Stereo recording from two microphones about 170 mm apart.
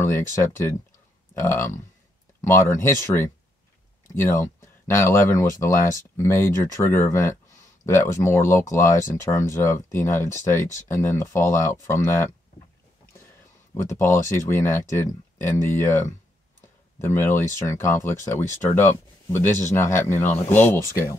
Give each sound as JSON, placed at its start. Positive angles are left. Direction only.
{"t": 0.0, "sound": "speech", "side_deg": 15}
{"t": 13.8, "sound": "speech", "side_deg": 15}